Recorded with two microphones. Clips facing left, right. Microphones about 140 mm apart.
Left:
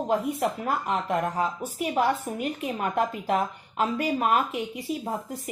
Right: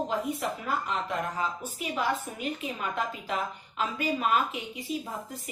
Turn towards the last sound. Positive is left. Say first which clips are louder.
# left 4 dB
turn(degrees=50)  # may be behind; listen again after turning